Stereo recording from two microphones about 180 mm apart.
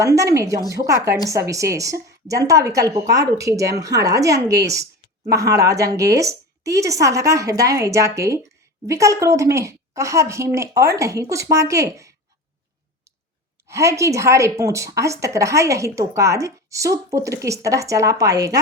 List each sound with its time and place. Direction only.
0.0 s a woman's voice: 15° right (ahead or behind)
13.7 s a woman's voice: 15° right (ahead or behind)